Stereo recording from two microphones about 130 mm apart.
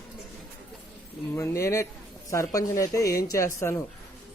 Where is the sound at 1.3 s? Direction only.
20° left (ahead or behind).